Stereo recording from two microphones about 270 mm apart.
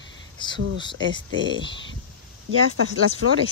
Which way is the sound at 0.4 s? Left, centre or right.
Centre.